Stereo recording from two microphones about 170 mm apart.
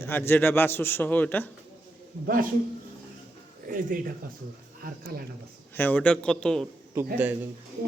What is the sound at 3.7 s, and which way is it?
A man's voice, 55° right (ahead or behind).